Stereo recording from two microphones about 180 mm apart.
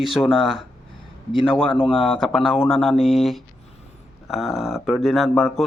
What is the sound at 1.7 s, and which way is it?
Speech, 30° left (ahead or behind).